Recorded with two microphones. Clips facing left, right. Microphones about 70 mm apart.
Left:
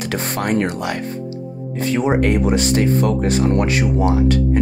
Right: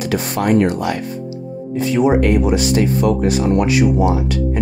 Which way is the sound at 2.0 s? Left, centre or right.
Left.